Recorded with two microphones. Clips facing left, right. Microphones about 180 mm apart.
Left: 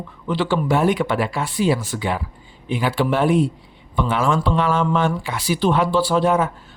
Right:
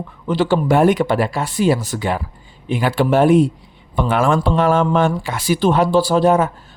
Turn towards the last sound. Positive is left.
turn(degrees=-40)  # may be behind; listen again after turning